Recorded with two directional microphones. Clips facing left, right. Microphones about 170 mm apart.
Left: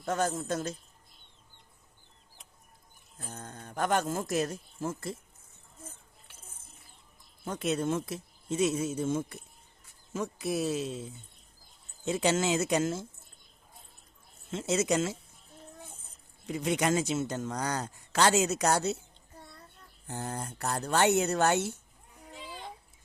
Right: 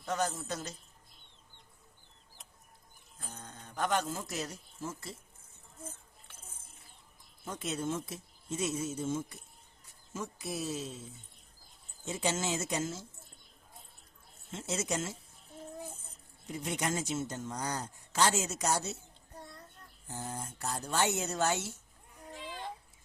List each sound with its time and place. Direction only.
0.0 s a man's voice: 50° left (ahead or behind)
3.2 s speech: 50° left (ahead or behind)
7.4 s a man's voice: 60° left (ahead or behind)
12.0 s a man's voice: 70° left (ahead or behind)
14.5 s speech: 85° left
16.5 s a man's voice: 80° left
19.4 s child singing: centre (ahead or behind)
20.1 s speech: 65° left (ahead or behind)